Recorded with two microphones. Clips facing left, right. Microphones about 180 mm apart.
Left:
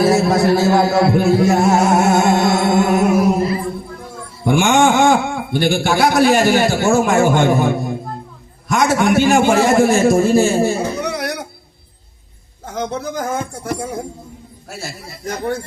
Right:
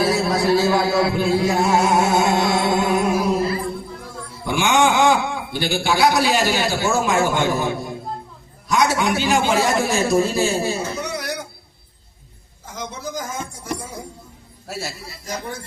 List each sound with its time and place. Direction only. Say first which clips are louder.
0.0 s music: left 5 dB; 50° left (ahead or behind)
4.4 s a sound: left 5 dB; 50° left (ahead or behind)
6.1 s a man's voice: left 7 dB; 50° left (ahead or behind)
12.6 s speech: left 8 dB; 60° left (ahead or behind)
15.1 s speech: left 11 dB; 60° left (ahead or behind)